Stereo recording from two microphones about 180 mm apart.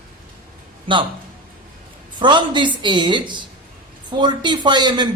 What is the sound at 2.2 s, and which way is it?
A man's voice, 25° right (ahead or behind).